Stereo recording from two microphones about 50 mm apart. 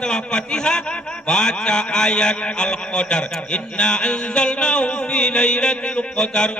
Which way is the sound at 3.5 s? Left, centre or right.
Centre.